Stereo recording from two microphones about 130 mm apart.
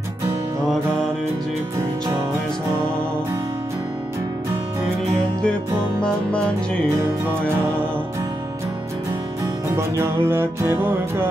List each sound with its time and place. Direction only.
5.9 s music: 10° left (ahead or behind)
9.8 s music: 20° right (ahead or behind)